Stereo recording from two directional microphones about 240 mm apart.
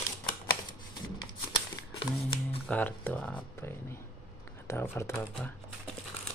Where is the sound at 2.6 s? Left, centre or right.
Centre.